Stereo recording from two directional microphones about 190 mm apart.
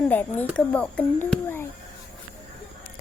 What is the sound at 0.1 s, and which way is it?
Speech, 10° left (ahead or behind).